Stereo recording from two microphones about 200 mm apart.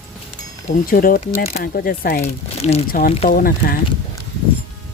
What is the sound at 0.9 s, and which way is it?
Speech, 45° left (ahead or behind).